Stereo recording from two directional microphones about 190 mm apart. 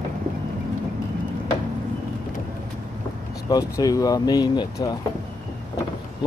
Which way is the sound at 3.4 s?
20° left (ahead or behind).